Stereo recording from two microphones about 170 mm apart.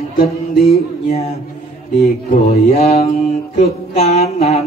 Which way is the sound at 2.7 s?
40° left (ahead or behind).